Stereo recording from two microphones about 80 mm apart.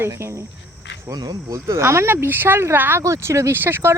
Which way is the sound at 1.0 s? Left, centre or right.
Right.